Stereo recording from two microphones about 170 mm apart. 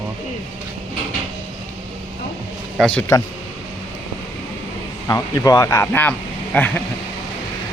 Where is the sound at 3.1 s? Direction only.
15° left (ahead or behind).